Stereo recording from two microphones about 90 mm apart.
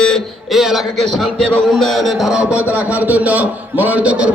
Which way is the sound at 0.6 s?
5° right (ahead or behind).